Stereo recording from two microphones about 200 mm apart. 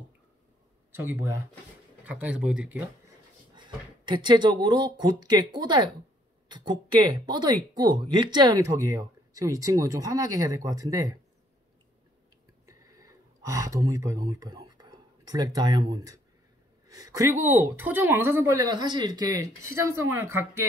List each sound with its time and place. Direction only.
2.0 s speech: 5° right (ahead or behind)
3.5 s speech: 25° right (ahead or behind)
12.6 s a sound: 15° right (ahead or behind)
16.8 s speech: 20° right (ahead or behind)